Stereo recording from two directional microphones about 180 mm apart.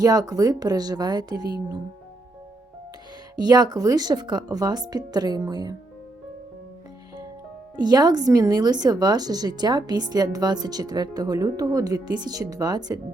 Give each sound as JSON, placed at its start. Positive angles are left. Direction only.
{"t": 0.0, "sound": "speech", "side_deg": -20}
{"t": 3.3, "sound": "speech", "side_deg": -20}
{"t": 7.8, "sound": "speech", "side_deg": -25}